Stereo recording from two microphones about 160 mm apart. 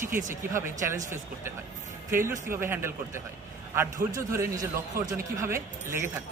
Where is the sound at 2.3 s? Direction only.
15° right (ahead or behind).